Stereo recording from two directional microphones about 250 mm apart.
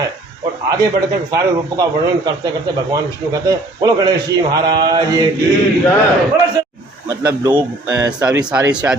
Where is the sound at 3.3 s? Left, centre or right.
Centre.